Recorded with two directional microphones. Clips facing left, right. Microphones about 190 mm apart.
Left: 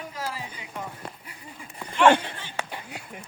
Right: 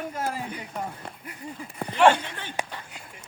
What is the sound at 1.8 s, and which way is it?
Speech, 50° right (ahead or behind).